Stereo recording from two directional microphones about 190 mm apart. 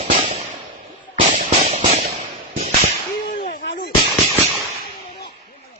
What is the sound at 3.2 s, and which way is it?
Whip, 35° left (ahead or behind).